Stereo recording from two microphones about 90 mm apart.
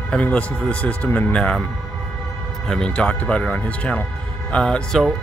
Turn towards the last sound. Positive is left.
turn(degrees=5)  # may be behind; listen again after turning